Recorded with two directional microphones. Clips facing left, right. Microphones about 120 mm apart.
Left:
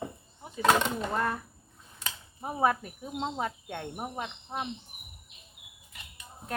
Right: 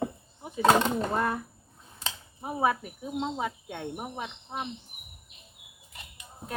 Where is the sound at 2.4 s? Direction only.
5° right (ahead or behind).